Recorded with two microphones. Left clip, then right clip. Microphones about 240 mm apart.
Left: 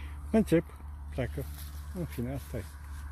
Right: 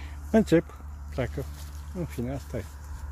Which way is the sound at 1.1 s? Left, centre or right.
Centre.